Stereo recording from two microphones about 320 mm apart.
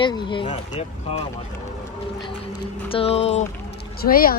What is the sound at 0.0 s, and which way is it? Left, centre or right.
Speech, centre.